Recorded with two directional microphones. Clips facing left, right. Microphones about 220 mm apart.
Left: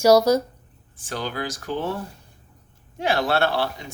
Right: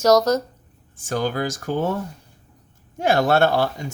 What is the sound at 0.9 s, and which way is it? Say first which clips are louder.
Speech: right 6 dB; 45° right (ahead or behind).